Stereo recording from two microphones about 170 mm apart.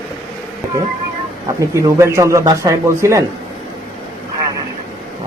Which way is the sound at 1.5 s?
20° right (ahead or behind).